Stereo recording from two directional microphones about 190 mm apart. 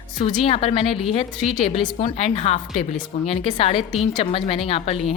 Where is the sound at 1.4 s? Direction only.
Centre (ahead or behind).